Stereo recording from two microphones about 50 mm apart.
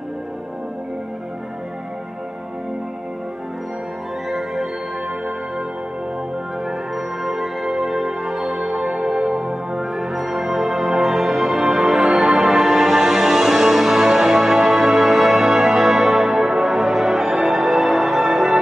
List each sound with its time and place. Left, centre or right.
4.3 s music: centre
7.0 s music: centre
9.9 s music: centre